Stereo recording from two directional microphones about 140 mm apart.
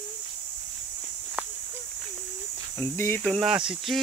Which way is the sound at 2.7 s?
15° left (ahead or behind).